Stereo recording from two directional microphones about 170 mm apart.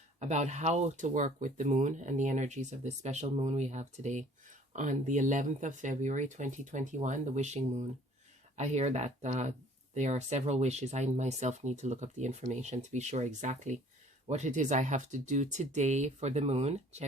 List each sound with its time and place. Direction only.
0.2 s speech: 45° right (ahead or behind)